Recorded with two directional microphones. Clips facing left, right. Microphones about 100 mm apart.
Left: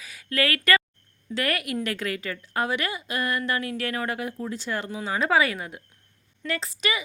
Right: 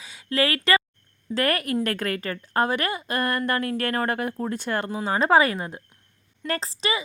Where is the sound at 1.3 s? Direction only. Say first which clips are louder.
Right 4 dB; 40° right (ahead or behind).